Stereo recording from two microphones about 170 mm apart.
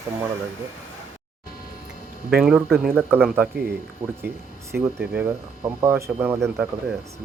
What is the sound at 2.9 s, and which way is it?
Speech, 15° right (ahead or behind).